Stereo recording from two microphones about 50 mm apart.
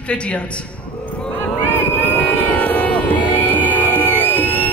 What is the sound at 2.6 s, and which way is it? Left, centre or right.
Music, left.